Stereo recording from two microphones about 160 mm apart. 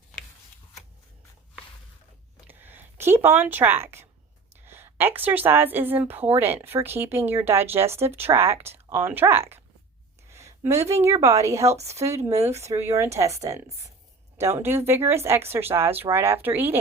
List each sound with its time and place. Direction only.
2.5 s speech: 10° right (ahead or behind)
10.2 s a sound: 15° right (ahead or behind)
11.2 s a woman's voice: 20° right (ahead or behind)
11.8 s speech: 40° right (ahead or behind)
12.0 s speech: 20° right (ahead or behind)
14.3 s speech: 15° right (ahead or behind)